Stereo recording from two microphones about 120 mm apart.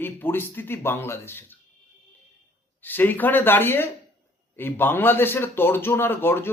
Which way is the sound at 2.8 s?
15° left (ahead or behind).